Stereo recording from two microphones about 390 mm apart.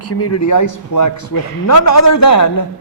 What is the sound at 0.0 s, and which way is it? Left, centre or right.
A man's voice, left.